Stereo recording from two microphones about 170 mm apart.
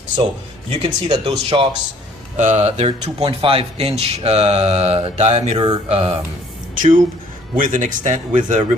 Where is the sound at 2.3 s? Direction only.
45° right (ahead or behind).